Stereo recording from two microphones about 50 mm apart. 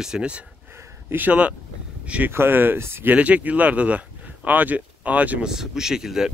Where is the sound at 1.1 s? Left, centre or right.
Right.